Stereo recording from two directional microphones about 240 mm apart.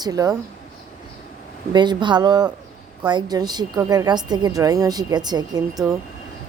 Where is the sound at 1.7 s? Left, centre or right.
Centre.